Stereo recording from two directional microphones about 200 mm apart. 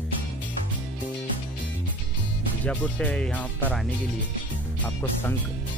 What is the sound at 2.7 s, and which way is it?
Speech, 5° left (ahead or behind).